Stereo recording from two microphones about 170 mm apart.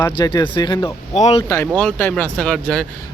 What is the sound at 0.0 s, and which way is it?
Speech, 25° left (ahead or behind).